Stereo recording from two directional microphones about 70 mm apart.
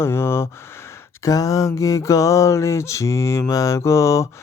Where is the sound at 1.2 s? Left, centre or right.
Left.